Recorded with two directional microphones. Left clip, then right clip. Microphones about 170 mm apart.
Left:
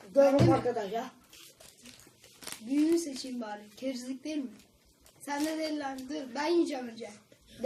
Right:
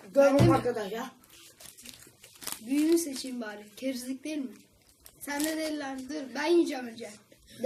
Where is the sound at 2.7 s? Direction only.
Centre (ahead or behind).